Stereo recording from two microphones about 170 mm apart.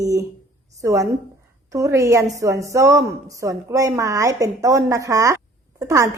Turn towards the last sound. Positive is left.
turn(degrees=-20)  # may be behind; listen again after turning